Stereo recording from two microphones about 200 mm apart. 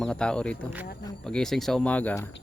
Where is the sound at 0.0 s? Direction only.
5° left (ahead or behind).